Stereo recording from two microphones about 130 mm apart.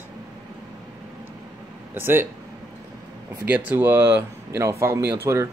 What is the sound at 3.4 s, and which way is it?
A man's voice, 15° right (ahead or behind).